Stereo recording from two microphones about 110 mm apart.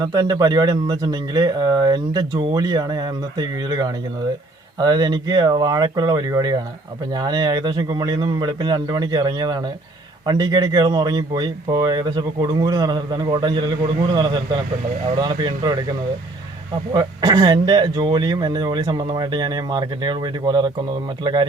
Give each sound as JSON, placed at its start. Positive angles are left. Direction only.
{"t": 0.1, "sound": "speech", "side_deg": -35}
{"t": 16.9, "sound": "speech", "side_deg": -40}